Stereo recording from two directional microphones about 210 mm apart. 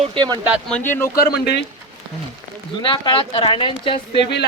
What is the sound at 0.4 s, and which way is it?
Speech, 5° right (ahead or behind).